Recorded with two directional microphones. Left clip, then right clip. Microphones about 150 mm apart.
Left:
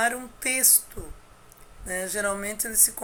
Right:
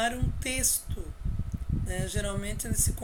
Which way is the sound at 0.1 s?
15° right (ahead or behind).